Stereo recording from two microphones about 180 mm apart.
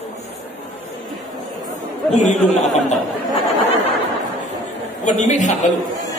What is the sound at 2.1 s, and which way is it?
Speech, 40° left (ahead or behind).